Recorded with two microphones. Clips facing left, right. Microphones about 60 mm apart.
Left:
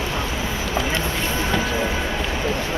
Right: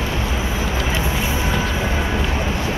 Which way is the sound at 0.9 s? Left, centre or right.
Centre.